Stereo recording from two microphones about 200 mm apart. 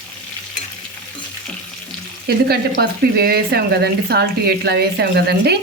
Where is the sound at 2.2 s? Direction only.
50° right (ahead or behind).